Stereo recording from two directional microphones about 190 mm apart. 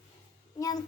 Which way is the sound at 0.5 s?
20° left (ahead or behind).